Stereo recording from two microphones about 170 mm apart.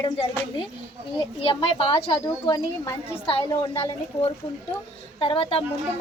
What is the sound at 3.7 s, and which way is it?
A woman's voice, 35° left (ahead or behind).